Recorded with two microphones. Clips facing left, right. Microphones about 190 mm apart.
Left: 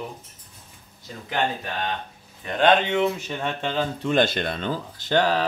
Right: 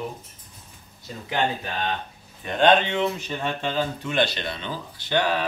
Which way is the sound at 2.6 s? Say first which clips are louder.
Even; 10° left (ahead or behind).